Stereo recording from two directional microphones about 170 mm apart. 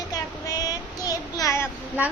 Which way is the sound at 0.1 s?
20° left (ahead or behind).